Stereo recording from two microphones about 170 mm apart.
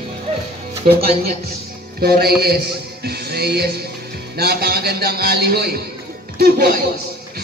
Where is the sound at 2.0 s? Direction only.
65° right (ahead or behind).